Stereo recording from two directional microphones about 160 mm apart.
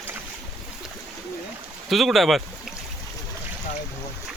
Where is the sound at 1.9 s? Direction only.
Centre (ahead or behind).